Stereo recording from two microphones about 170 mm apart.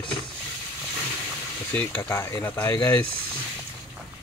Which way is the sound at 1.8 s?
10° left (ahead or behind).